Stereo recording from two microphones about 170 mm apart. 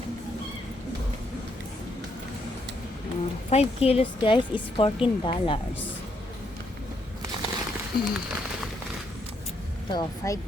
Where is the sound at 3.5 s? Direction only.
35° left (ahead or behind).